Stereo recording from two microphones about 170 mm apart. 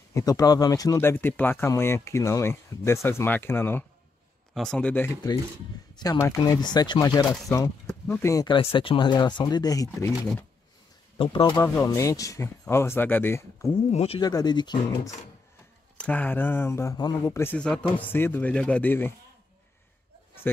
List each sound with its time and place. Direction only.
0.1 s speech: 20° left (ahead or behind)
11.1 s speech: 30° left (ahead or behind)
11.6 s speech: 15° left (ahead or behind)
13.8 s speech: 35° left (ahead or behind)
14.2 s speech: 25° left (ahead or behind)
16.0 s speech: 10° left (ahead or behind)